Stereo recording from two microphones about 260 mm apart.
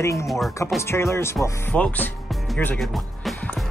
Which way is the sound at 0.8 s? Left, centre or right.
Centre.